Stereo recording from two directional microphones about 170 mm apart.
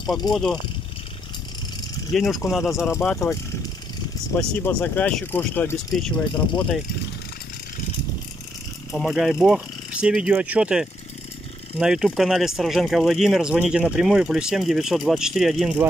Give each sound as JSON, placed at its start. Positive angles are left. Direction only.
{"t": 0.3, "sound": "speech", "side_deg": 0}
{"t": 2.1, "sound": "speech", "side_deg": 0}
{"t": 2.6, "sound": "speech", "side_deg": 15}
{"t": 4.4, "sound": "speech", "side_deg": 10}
{"t": 8.9, "sound": "speech", "side_deg": 0}